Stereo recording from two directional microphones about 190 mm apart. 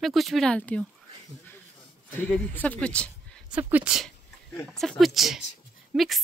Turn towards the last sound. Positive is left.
turn(degrees=0)  # may be behind; listen again after turning